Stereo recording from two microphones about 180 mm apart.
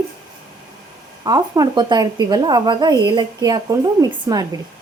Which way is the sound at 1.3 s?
20° right (ahead or behind).